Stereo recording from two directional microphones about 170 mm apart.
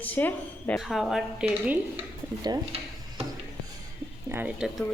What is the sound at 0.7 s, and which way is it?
Speech, centre (ahead or behind).